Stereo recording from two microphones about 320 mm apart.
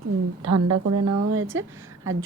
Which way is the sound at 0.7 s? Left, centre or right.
Right.